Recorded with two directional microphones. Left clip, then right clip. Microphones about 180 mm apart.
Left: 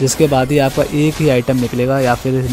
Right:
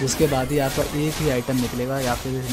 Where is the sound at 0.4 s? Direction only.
40° left (ahead or behind).